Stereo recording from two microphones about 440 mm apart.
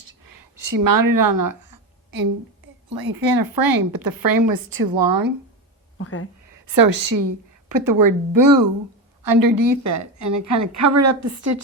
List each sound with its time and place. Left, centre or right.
0.3 s speech: right
2.9 s speech: right
6.0 s speech: left
6.7 s a woman's voice: right